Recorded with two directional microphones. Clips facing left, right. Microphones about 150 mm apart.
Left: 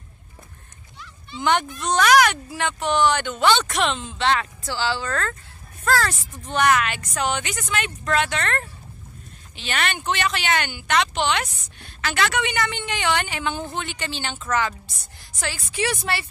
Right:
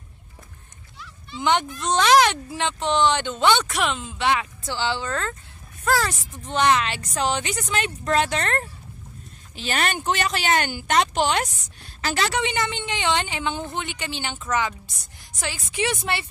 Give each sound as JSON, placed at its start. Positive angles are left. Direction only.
{"t": 0.9, "sound": "a sound", "side_deg": 0}
{"t": 1.4, "sound": "speech", "side_deg": -20}
{"t": 3.6, "sound": "speech", "side_deg": -5}